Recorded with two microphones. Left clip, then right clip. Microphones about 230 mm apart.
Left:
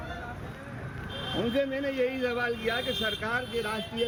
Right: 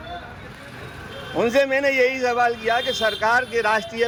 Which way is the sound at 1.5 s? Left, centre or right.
Right.